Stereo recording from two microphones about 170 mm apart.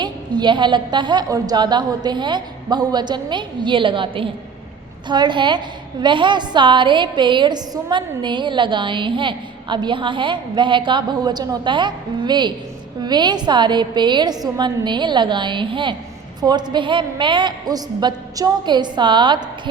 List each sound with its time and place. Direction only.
0.0 s a woman's voice: 25° right (ahead or behind)